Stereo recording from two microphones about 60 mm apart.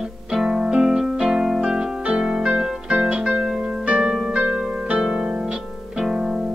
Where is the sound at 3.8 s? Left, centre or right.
Centre.